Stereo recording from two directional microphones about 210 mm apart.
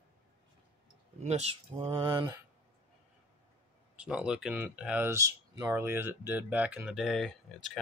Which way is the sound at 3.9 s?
5° right (ahead or behind).